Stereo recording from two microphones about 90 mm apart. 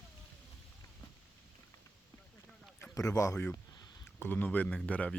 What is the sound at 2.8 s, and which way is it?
Speech, 40° left (ahead or behind).